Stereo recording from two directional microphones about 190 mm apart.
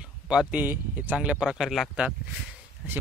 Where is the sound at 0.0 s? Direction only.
5° right (ahead or behind).